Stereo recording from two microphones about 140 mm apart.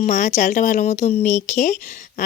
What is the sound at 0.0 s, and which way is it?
Speech, 60° left (ahead or behind).